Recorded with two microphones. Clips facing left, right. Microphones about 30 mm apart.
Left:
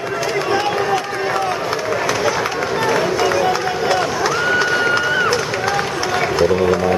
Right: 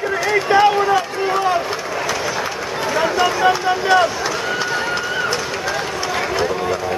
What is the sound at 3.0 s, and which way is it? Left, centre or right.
Run, centre.